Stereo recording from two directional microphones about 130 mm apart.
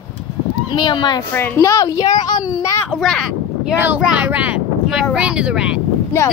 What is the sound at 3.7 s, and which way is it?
Speech, 15° right (ahead or behind).